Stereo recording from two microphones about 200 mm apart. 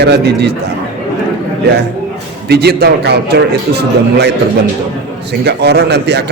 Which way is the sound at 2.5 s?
55° right (ahead or behind).